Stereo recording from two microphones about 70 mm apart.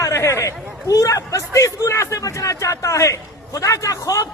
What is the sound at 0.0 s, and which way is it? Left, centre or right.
A man's voice, left.